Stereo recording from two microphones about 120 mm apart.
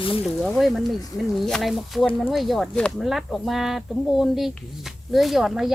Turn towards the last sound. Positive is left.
turn(degrees=-5)  # may be behind; listen again after turning